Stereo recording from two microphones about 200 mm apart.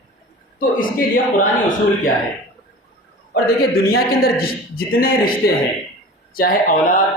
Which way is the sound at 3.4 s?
50° left (ahead or behind).